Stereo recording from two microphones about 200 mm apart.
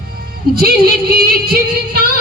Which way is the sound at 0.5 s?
50° right (ahead or behind).